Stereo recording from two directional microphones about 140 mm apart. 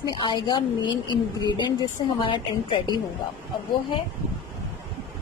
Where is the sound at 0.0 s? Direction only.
35° left (ahead or behind).